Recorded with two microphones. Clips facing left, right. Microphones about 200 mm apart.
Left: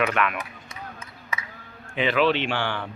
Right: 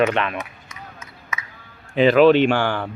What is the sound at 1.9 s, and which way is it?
Speech, 40° right (ahead or behind).